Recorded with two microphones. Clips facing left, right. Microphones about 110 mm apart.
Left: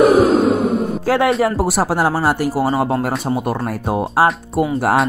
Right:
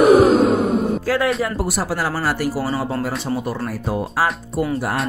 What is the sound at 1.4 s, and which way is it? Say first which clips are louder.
Speech: left 6 dB; 90° left.